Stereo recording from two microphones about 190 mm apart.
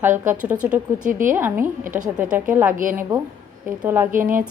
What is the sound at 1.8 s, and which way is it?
A woman's voice, 40° right (ahead or behind).